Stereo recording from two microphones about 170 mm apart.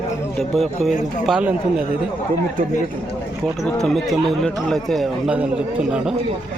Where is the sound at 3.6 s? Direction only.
5° left (ahead or behind).